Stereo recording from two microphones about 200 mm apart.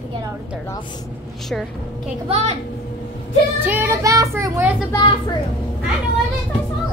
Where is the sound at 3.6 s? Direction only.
10° right (ahead or behind).